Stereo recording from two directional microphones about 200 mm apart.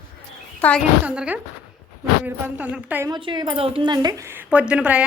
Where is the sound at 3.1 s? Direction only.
25° right (ahead or behind); by 5.0 s 5° right (ahead or behind).